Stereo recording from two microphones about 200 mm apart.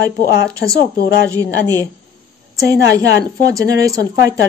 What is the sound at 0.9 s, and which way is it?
Speech, 50° left (ahead or behind).